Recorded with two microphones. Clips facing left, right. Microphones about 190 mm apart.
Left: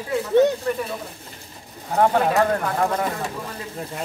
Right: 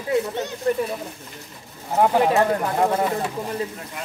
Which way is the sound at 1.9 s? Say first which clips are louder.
Right 1 dB; 10° right (ahead or behind).